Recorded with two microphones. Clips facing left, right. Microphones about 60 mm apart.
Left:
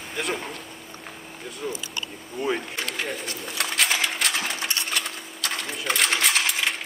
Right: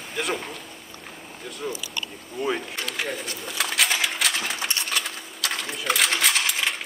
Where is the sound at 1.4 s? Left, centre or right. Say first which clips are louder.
Even; centre.